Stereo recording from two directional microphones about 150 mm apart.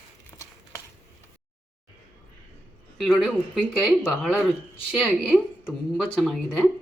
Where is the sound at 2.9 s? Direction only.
5° left (ahead or behind).